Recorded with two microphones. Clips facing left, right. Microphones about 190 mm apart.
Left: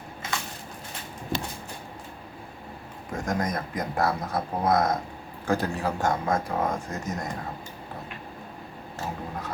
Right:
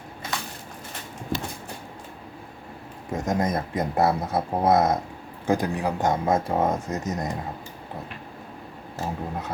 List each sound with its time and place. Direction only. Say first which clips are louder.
3.1 s speech: right 4 dB; 20° right (ahead or behind)